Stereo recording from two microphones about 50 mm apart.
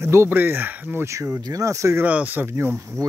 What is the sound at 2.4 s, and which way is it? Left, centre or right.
Speech, right.